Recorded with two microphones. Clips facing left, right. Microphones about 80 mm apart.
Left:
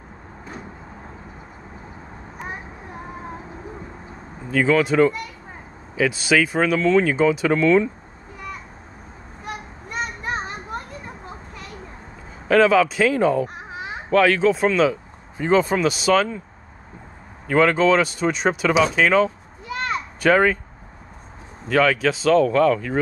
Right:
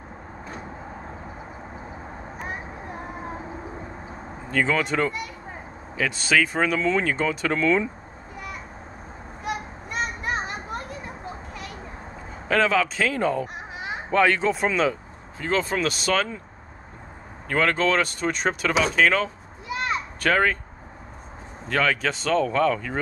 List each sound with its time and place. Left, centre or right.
4.5 s speech: centre
9.4 s children playing: centre
12.4 s speech: centre
15.3 s speech: centre
15.6 s speech: centre
17.5 s speech: centre
19.7 s a sound: centre
20.2 s speech: centre
21.6 s speech: centre